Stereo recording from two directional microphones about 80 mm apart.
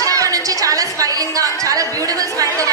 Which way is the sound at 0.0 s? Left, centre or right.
Right.